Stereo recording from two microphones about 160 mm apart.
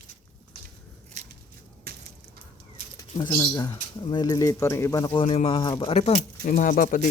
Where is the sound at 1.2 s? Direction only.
45° right (ahead or behind).